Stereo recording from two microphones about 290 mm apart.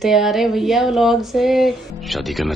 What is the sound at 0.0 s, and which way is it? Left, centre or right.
Speech, centre.